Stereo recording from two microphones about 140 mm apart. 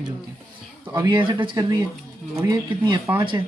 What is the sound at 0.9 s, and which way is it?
Speech, 35° right (ahead or behind).